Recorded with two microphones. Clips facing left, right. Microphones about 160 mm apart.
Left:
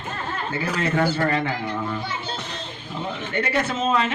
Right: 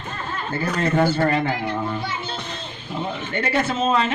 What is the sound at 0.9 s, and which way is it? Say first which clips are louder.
Speech: right 3 dB; 30° right (ahead or behind).